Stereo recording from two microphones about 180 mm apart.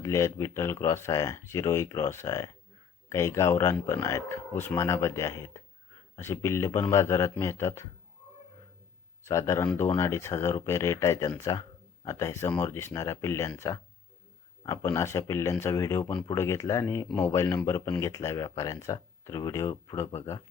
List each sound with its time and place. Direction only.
0.0 s speech: 15° left (ahead or behind)
9.2 s speech: 15° left (ahead or behind)